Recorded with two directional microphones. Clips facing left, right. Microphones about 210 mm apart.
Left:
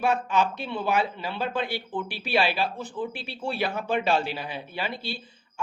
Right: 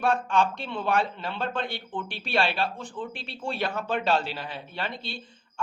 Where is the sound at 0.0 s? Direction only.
5° left (ahead or behind).